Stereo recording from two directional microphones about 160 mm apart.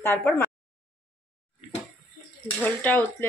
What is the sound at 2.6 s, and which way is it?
Speech, 10° left (ahead or behind).